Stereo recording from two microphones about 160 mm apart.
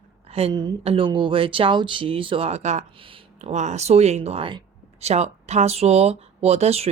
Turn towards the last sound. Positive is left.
turn(degrees=-40)  # may be behind; listen again after turning